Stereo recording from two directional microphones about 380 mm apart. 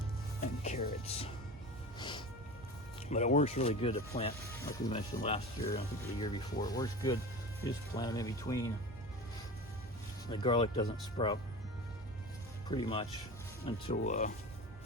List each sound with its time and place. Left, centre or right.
0.6 s speech: centre
2.0 s music: centre
3.1 s speech: centre
10.2 s speech: centre
12.6 s speech: centre